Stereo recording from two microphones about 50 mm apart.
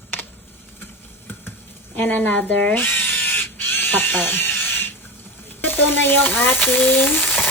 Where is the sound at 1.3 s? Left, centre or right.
Left.